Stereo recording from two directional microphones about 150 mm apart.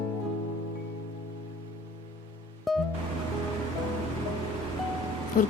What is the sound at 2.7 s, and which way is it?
Music, centre (ahead or behind).